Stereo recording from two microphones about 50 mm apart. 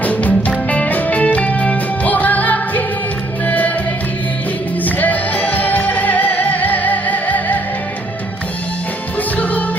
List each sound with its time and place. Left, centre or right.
0.0 s music: left
4.9 s music: left
9.3 s music: left